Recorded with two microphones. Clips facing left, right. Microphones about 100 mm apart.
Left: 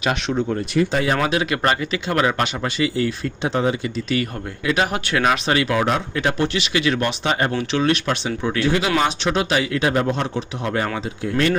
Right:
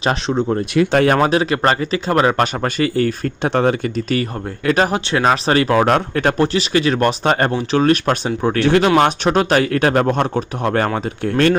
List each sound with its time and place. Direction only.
0.0 s speech: 30° right (ahead or behind)
0.8 s speech: 70° right (ahead or behind)
1.2 s speech: 35° right (ahead or behind); by 3.8 s 60° right (ahead or behind)
4.1 s speech: 40° right (ahead or behind)
8.6 s speech: 60° right (ahead or behind)
9.0 s speech: 50° right (ahead or behind)